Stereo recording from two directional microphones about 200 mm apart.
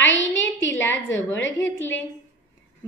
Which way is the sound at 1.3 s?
65° left (ahead or behind).